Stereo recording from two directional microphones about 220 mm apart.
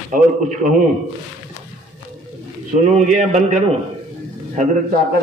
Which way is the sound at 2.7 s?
30° right (ahead or behind).